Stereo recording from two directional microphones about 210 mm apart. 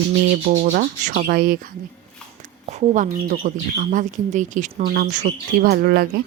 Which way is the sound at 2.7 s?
35° right (ahead or behind).